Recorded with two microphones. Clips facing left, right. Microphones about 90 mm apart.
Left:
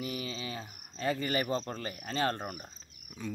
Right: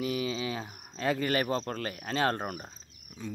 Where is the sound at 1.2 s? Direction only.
90° right.